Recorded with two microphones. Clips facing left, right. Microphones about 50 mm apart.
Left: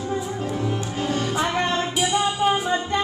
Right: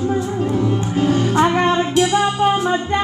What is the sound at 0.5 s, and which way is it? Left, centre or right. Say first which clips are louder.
Music: right 8 dB; centre.